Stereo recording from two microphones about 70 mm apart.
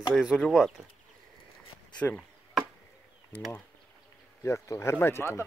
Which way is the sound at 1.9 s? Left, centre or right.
Centre.